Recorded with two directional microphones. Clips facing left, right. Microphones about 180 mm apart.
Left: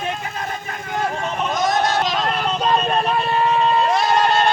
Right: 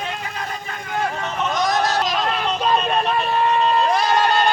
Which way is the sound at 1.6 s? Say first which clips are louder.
Left 1 dB; centre (ahead or behind).